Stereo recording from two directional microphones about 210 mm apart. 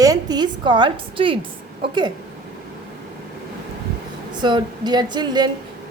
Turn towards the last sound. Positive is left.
turn(degrees=-20)  # may be behind; listen again after turning